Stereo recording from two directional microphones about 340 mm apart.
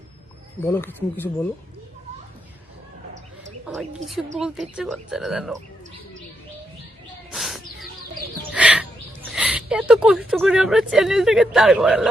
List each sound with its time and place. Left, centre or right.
0.6 s a man's voice: centre
3.7 s a man's voice: centre
7.3 s bird: centre
9.3 s a sound: centre
10.2 s a man's voice: centre